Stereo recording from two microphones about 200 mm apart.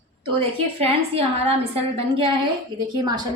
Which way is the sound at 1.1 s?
30° right (ahead or behind).